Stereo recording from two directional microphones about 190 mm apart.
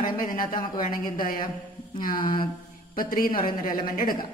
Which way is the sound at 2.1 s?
25° left (ahead or behind).